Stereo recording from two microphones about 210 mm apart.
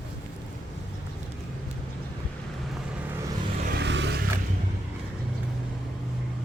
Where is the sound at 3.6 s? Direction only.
50° right (ahead or behind).